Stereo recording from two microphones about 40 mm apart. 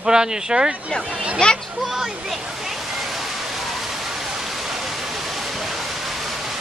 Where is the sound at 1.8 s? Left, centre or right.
Centre.